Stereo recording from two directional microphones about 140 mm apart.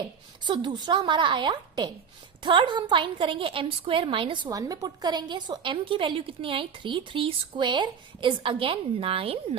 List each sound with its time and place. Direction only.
0.4 s a woman's voice: 35° right (ahead or behind)
4.4 s a woman's voice: 25° right (ahead or behind); by 9.6 s 45° right (ahead or behind)